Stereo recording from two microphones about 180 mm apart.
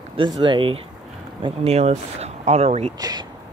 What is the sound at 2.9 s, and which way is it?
Speech, 20° right (ahead or behind).